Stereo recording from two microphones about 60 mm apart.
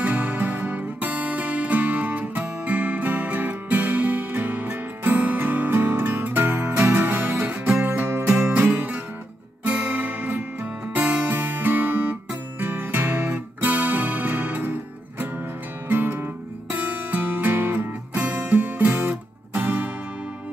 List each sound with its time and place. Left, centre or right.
0.0 s music: right
8.4 s music: right
8.7 s music: right